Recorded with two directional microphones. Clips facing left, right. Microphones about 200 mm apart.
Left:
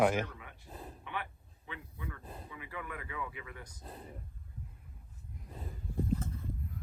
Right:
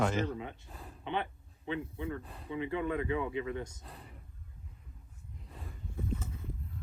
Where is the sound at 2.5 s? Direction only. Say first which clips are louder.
Right 13 dB; 25° right (ahead or behind).